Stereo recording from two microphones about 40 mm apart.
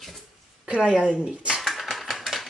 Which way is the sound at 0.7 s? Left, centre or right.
Centre.